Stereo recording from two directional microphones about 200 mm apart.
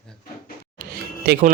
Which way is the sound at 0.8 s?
50° right (ahead or behind).